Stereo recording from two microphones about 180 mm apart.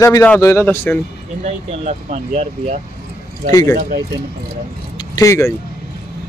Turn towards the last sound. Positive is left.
turn(degrees=15)  # may be behind; listen again after turning